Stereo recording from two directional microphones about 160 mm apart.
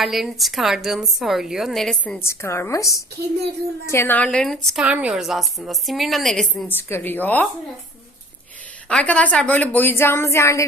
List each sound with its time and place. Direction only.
0.0 s a woman's voice: centre (ahead or behind)
2.2 s a woman's voice: 15° left (ahead or behind)
6.7 s a woman's voice: 15° left (ahead or behind)
8.9 s a woman's voice: 5° left (ahead or behind)